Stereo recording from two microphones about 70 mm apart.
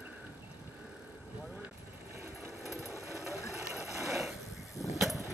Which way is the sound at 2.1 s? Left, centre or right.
Right.